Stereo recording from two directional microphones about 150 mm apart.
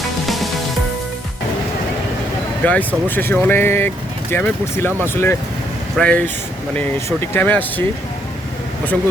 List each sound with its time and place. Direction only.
0.3 s music: centre (ahead or behind)
2.6 s speech: 10° left (ahead or behind)